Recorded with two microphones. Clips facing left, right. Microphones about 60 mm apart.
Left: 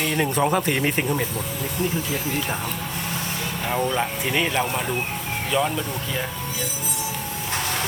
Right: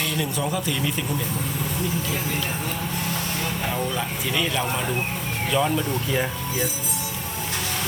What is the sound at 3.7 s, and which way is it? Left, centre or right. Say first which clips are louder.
Speech: left 3 dB; left.